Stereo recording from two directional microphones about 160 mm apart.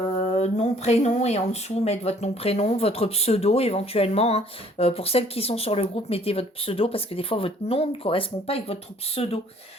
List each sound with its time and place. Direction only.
0.3 s speech: 45° left (ahead or behind)